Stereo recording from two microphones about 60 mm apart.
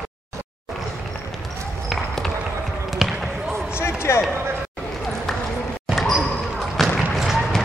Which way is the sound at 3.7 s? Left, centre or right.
Left.